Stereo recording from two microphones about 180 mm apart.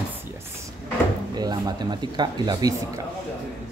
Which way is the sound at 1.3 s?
20° right (ahead or behind).